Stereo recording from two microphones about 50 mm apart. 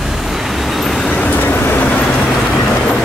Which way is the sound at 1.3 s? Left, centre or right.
Left.